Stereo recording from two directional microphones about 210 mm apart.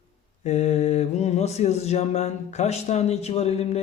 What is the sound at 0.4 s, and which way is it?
Mantra, 30° left (ahead or behind).